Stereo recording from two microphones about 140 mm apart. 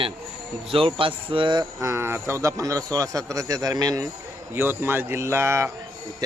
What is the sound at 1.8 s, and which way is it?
A man's voice, 20° right (ahead or behind).